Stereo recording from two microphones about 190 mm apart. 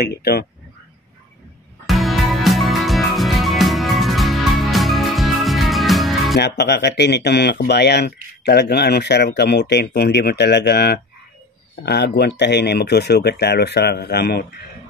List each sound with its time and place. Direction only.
0.0 s speech: 55° left (ahead or behind)
1.9 s music: centre (ahead or behind)
6.3 s speech: 65° left (ahead or behind)